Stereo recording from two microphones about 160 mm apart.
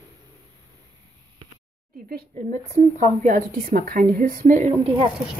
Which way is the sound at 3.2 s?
60° right (ahead or behind).